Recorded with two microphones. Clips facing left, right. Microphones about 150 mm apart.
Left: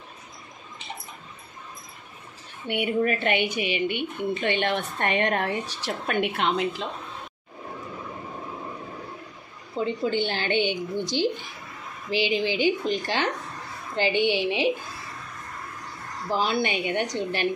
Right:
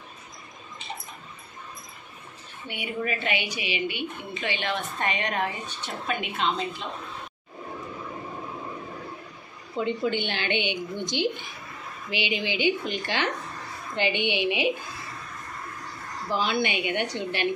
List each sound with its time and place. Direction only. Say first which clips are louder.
2.7 s a woman's voice: left 10 dB; 65° left (ahead or behind)
3.0 s a woman's voice: left 4 dB; 50° left (ahead or behind); by 6.8 s 70° left (ahead or behind)
9.8 s a woman's voice: left 1 dB; 35° left (ahead or behind)
16.3 s a woman's voice: left 1 dB; 40° left (ahead or behind)